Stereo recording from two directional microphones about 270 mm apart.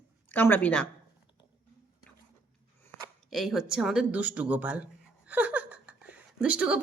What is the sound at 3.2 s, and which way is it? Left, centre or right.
Speech, centre.